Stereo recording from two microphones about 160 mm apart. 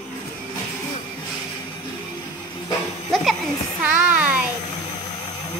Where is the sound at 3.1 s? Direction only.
Centre (ahead or behind).